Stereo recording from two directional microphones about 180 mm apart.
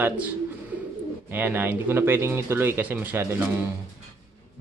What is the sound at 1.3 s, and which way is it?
Speech, 10° right (ahead or behind).